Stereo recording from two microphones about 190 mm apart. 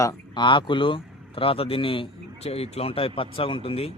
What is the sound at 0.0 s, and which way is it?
A man's voice, 20° left (ahead or behind).